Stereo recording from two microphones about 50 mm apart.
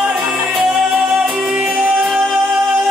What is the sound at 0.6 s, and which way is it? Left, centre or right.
Music, centre.